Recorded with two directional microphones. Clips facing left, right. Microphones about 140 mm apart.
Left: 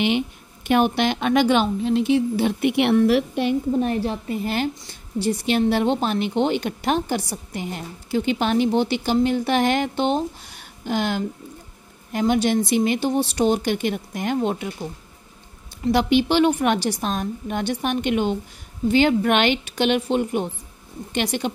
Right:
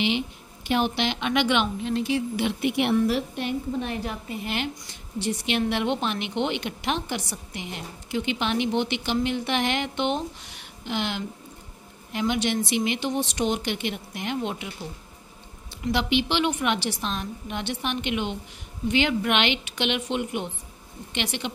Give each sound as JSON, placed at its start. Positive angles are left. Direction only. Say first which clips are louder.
{"t": 0.7, "sound": "a woman's voice", "louder": "left 6 dB", "side_deg": 50}
{"t": 2.6, "sound": "a woman's voice", "louder": "left 5 dB", "side_deg": 70}
{"t": 3.8, "sound": "a woman's voice", "louder": "left 7 dB", "side_deg": 35}
{"t": 15.8, "sound": "a woman's voice", "louder": "left 6 dB", "side_deg": 45}